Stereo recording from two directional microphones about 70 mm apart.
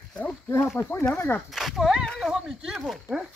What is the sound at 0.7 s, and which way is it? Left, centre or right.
Speech, left.